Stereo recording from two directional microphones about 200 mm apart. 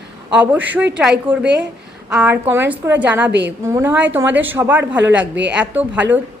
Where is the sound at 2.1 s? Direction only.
5° right (ahead or behind).